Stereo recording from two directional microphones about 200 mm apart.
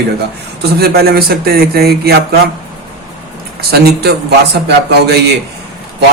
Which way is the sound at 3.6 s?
50° right (ahead or behind).